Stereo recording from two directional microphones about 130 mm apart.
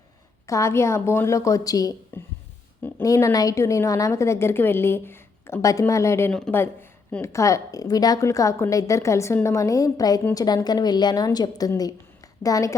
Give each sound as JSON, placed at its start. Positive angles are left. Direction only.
{"t": 0.4, "sound": "a woman's voice", "side_deg": 25}